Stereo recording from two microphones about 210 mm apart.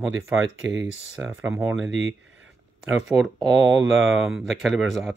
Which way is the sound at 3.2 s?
Centre (ahead or behind).